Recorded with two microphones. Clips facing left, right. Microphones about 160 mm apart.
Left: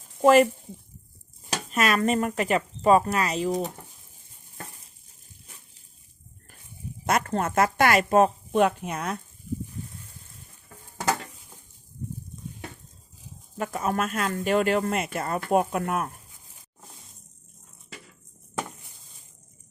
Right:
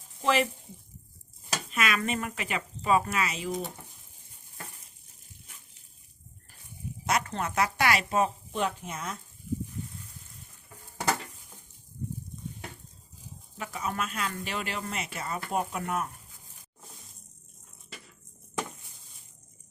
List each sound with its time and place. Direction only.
0.2 s speech: 45° left (ahead or behind)
1.7 s speech: 40° left (ahead or behind)
7.0 s speech: 50° left (ahead or behind)
13.6 s speech: 50° left (ahead or behind)